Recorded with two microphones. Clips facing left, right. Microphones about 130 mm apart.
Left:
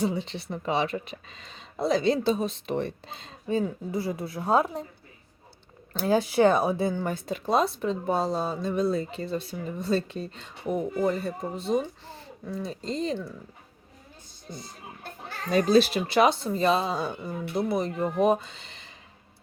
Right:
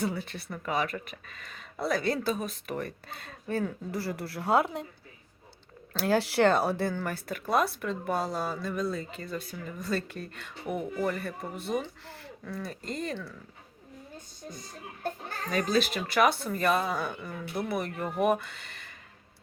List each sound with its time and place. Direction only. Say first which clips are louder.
0.0 s speech: left 4 dB; 20° left (ahead or behind)
3.1 s speech: left 1 dB; 55° right (ahead or behind)
3.4 s speech: left 4 dB; 15° left (ahead or behind)
6.0 s speech: left 3 dB; 15° left (ahead or behind)
15.4 s speech: left 7 dB; 35° left (ahead or behind)
16.1 s speech: left 3 dB; 25° left (ahead or behind)